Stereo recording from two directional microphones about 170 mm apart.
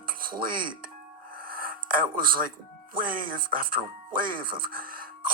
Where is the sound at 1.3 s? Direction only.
60° right (ahead or behind).